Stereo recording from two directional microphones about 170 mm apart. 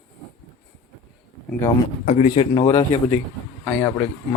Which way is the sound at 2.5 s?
20° left (ahead or behind).